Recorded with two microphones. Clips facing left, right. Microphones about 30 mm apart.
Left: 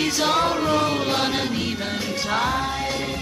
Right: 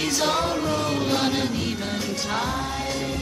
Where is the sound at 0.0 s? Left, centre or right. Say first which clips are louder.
Left 3 dB; centre.